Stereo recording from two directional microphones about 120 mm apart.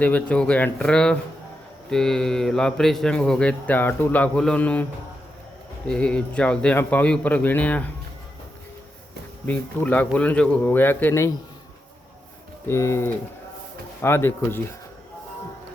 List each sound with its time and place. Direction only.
0.0 s a man's voice: 15° left (ahead or behind)
5.9 s speech: 10° left (ahead or behind)
9.5 s speech: 15° left (ahead or behind)
12.6 s speech: 20° left (ahead or behind)